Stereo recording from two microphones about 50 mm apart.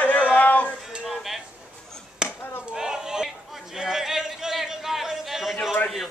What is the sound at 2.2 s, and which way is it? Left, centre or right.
Chop, centre.